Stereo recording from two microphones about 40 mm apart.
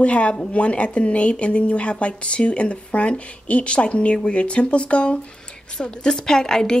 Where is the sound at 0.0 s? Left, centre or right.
Left.